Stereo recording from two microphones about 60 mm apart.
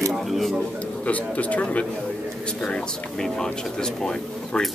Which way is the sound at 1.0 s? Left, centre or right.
Left.